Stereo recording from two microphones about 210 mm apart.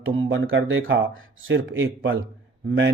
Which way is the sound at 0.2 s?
65° right (ahead or behind).